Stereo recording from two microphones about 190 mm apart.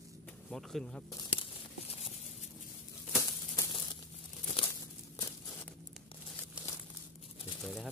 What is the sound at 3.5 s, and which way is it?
Crumpling, 20° left (ahead or behind).